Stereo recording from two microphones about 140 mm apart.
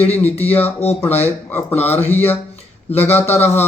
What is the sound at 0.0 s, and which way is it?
Speech, 10° left (ahead or behind).